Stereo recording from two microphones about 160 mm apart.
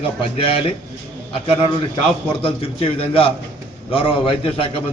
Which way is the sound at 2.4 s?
35° left (ahead or behind).